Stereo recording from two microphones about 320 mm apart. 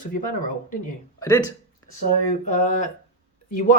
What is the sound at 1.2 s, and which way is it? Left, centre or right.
Speech, centre.